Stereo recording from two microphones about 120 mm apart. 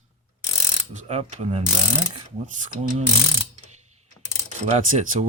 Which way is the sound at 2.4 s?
90° right.